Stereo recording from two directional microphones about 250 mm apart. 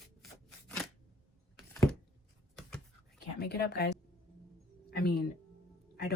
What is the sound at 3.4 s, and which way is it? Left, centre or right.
A woman's voice, left.